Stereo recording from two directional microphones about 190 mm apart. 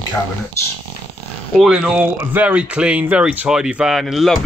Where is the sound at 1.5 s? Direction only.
5° right (ahead or behind).